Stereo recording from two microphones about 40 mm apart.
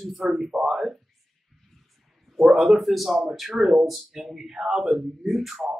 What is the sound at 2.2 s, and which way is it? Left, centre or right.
A man's voice, centre.